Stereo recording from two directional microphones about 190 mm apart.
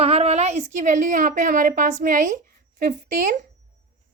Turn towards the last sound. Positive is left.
turn(degrees=-40)  # may be behind; listen again after turning